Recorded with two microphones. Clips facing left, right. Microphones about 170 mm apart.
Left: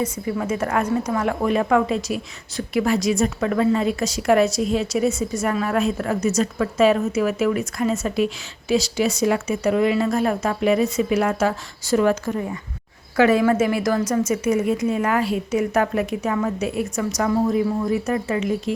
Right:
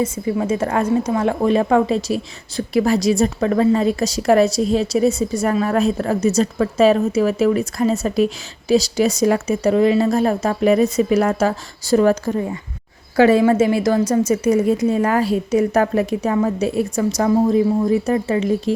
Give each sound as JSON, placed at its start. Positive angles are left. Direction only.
{"t": 0.0, "sound": "a woman's voice", "side_deg": -25}